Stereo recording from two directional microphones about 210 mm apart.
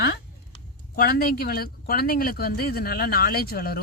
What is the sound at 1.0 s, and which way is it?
Speech, 45° left (ahead or behind).